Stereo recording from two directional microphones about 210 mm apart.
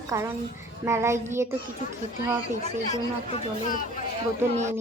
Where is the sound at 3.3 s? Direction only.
40° left (ahead or behind).